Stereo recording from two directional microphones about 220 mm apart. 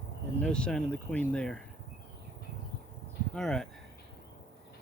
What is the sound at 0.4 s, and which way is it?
Speech, 5° left (ahead or behind).